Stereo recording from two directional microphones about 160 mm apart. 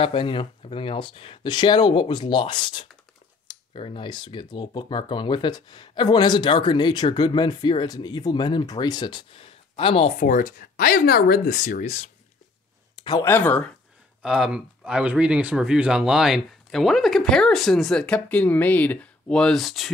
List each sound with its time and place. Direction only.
0.0 s speech: 30° left (ahead or behind)
10.1 s speech: 55° left (ahead or behind)
12.9 s a sound: 30° left (ahead or behind)
13.2 s speech: 10° left (ahead or behind)
14.2 s speech: 5° right (ahead or behind)